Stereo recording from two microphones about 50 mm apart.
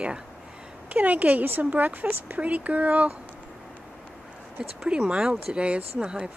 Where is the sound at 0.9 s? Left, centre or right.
Right.